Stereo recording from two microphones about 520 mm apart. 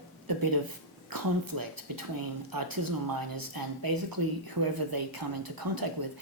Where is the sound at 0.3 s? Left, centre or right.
Right.